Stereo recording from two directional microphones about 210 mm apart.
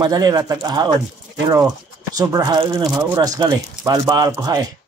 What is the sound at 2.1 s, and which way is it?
Speech, 20° right (ahead or behind).